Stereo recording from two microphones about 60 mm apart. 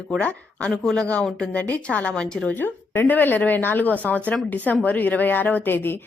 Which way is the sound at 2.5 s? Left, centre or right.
Left.